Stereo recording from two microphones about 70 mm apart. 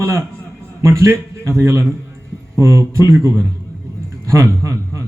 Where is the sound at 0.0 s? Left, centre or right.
Right.